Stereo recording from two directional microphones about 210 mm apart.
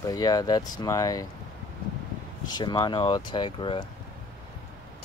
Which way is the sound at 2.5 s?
20° left (ahead or behind).